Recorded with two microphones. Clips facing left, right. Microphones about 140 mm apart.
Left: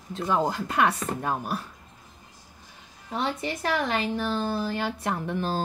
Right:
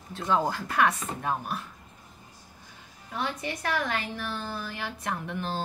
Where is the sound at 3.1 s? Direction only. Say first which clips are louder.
Left 3 dB; 25° left (ahead or behind).